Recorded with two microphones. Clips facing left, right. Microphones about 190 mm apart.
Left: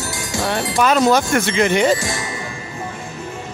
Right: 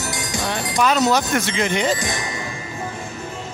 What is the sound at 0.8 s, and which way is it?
Speech, 50° left (ahead or behind).